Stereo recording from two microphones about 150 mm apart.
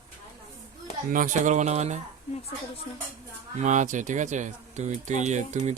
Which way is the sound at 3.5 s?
55° right (ahead or behind).